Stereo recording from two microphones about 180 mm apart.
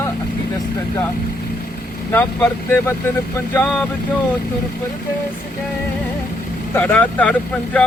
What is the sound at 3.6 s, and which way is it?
Speech, 5° left (ahead or behind).